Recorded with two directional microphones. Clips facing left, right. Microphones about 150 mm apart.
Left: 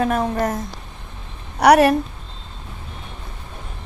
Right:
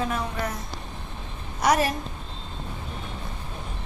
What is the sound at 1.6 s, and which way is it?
Speech, 65° left (ahead or behind).